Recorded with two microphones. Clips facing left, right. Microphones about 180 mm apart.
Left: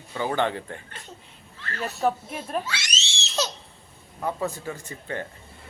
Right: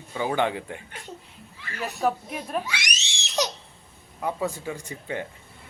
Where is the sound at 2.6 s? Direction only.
15° right (ahead or behind).